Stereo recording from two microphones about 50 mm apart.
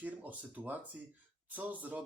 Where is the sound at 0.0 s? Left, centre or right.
Right.